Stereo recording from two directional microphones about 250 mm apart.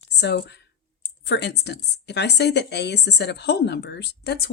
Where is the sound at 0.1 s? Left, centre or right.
Left.